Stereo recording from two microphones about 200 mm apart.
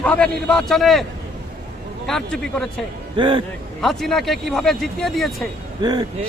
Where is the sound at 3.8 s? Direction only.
Centre (ahead or behind).